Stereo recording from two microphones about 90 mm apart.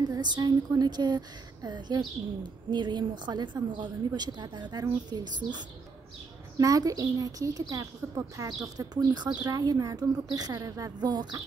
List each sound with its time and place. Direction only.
0.1 s a woman's voice: 55° right (ahead or behind)
6.6 s a woman's voice: 40° right (ahead or behind)
8.0 s speech: 25° right (ahead or behind)
8.4 s a woman's voice: 40° right (ahead or behind)
8.7 s a woman's voice: 50° right (ahead or behind)